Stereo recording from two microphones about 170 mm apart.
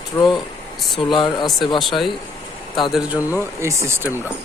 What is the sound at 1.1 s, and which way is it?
Speech, 25° left (ahead or behind).